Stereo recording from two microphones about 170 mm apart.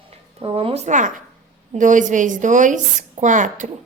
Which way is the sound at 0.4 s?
35° right (ahead or behind).